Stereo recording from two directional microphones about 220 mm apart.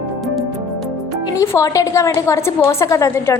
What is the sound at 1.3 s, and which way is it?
A woman's voice, 15° left (ahead or behind).